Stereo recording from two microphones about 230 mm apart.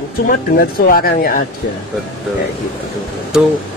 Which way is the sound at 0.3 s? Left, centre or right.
Left.